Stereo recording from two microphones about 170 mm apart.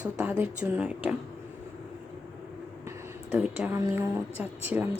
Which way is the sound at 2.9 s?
10° right (ahead or behind).